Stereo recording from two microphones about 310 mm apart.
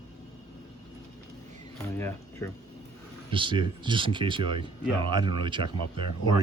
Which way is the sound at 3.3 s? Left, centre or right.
Centre.